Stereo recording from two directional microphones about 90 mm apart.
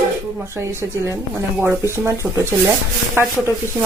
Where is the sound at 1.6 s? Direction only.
30° right (ahead or behind).